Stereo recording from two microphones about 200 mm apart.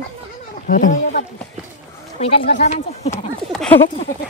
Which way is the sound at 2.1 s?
30° left (ahead or behind).